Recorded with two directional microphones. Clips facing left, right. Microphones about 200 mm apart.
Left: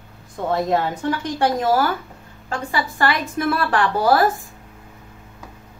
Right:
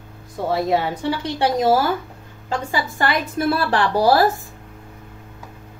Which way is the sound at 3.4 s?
35° right (ahead or behind).